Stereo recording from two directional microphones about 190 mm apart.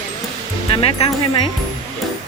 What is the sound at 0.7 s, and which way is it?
Speech, 25° left (ahead or behind).